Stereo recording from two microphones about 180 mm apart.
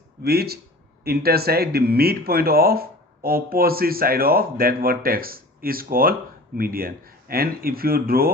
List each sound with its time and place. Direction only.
0.2 s speech: 60° right (ahead or behind)